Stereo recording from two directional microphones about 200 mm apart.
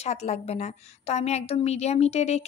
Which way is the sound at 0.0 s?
35° left (ahead or behind).